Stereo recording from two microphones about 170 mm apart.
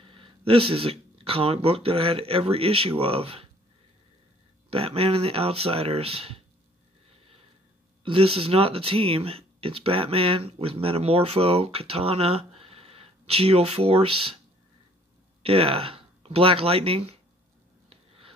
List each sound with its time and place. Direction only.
0.0 s speech: 30° right (ahead or behind)
4.6 s speech: 35° right (ahead or behind)
8.0 s speech: 35° right (ahead or behind)
15.4 s speech: 30° right (ahead or behind)
17.8 s a sound: 35° right (ahead or behind)